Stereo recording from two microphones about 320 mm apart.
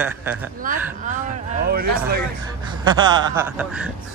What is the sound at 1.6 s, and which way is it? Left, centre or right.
Speech, right.